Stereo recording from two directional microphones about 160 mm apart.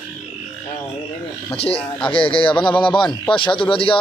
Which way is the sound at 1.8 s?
10° left (ahead or behind).